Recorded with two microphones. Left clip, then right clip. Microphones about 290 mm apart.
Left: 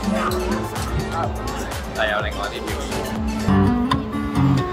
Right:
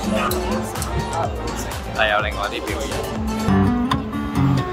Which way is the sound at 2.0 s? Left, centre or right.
Centre.